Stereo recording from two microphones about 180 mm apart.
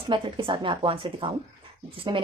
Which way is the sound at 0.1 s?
25° right (ahead or behind).